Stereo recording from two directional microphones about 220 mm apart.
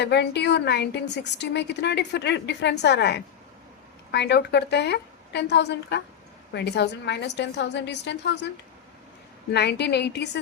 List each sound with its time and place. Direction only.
0.0 s a woman's voice: 50° left (ahead or behind)
9.5 s a woman's voice: 50° left (ahead or behind)